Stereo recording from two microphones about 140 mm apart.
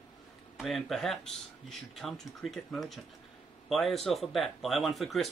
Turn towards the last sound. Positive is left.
turn(degrees=0)  # may be behind; listen again after turning